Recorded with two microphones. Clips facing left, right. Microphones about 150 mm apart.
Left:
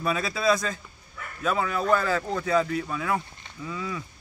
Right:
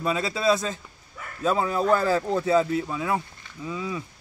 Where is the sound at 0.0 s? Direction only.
20° right (ahead or behind).